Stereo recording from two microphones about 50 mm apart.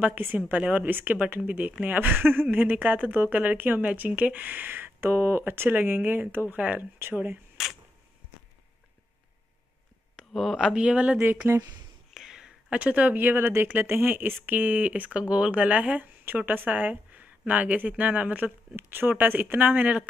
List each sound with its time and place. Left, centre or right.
0.0 s speech: right
0.5 s speech: right
0.8 s speech: right
6.5 s speech: right
6.8 s speech: right
7.6 s camera: centre
10.3 s speech: centre
10.7 s speech: centre
11.1 s speech: right
12.1 s a sound: centre
12.7 s speech: right
18.8 s speech: right